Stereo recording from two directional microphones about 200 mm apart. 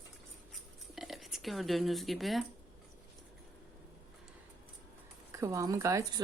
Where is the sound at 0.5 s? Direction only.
Centre (ahead or behind).